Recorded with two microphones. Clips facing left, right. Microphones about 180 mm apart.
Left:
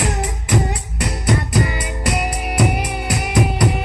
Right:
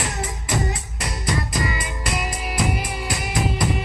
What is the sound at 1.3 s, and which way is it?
Music, 60° left (ahead or behind).